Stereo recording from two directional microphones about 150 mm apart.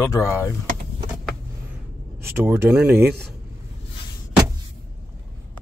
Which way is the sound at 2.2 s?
15° right (ahead or behind).